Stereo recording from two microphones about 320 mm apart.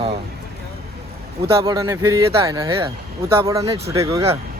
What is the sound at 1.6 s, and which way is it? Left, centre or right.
Speech, centre.